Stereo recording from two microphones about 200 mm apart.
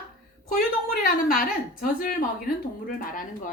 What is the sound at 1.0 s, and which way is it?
A woman's voice, 45° left (ahead or behind).